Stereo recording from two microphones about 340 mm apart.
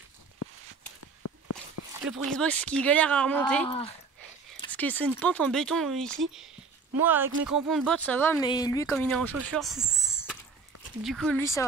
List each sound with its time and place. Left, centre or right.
2.0 s speech: centre
3.6 s speech: centre
4.6 s speech: centre